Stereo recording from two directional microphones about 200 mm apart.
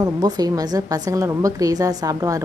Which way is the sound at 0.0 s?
20° right (ahead or behind).